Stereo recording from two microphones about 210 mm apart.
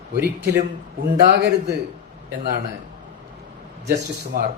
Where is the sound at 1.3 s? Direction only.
55° right (ahead or behind).